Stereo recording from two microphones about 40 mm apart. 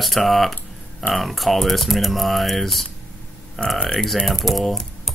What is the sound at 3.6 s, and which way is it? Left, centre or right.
Speech, left.